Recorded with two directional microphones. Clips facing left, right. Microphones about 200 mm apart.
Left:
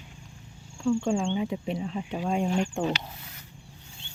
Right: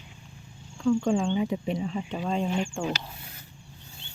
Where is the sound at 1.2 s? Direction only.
Centre (ahead or behind); by 2.9 s 15° left (ahead or behind).